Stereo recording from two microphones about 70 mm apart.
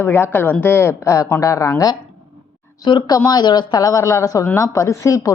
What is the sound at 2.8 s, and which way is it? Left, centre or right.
Speech, left.